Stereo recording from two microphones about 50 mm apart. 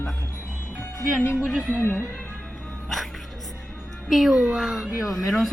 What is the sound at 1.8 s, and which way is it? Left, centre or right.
Speech, left.